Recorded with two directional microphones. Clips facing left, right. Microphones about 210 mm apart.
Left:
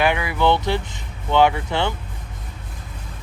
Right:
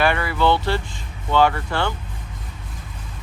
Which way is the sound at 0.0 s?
15° left (ahead or behind).